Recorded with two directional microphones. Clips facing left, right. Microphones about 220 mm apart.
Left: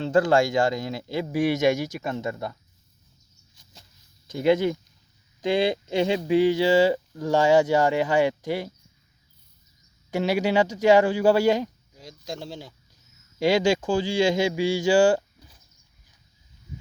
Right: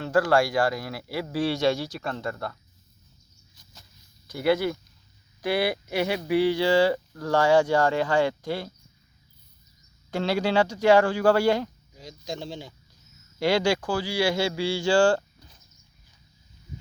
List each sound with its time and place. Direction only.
0.0 s speech: 20° left (ahead or behind)
4.3 s speech: 20° left (ahead or behind)
10.1 s speech: 15° left (ahead or behind)
11.9 s speech: centre (ahead or behind)
13.4 s speech: 15° left (ahead or behind)